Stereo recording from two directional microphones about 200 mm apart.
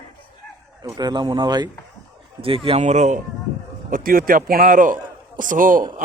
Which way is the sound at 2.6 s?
30° right (ahead or behind).